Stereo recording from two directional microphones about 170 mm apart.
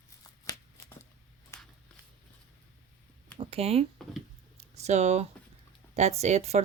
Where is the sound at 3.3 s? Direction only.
35° right (ahead or behind).